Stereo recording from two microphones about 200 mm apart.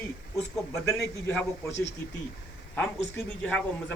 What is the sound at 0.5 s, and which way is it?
A man's voice, centre (ahead or behind).